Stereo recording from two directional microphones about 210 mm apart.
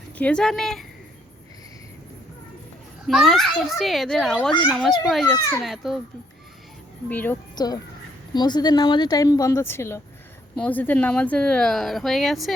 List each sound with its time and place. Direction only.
0.2 s speech: 5° left (ahead or behind)
3.1 s speech: centre (ahead or behind)
7.1 s a woman's voice: 10° left (ahead or behind)
7.5 s speech: 20° left (ahead or behind); by 12.5 s centre (ahead or behind)